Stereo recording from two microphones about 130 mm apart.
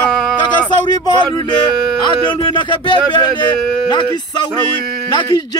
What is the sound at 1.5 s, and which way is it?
Speech, 35° left (ahead or behind).